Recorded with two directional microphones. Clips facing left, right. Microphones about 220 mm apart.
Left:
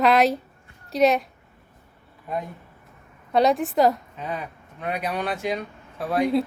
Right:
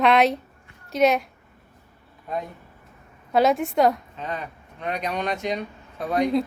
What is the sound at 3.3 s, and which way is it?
A woman's voice, centre (ahead or behind).